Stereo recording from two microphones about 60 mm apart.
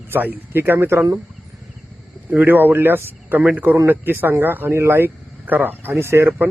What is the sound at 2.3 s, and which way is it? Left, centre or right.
Speech, right.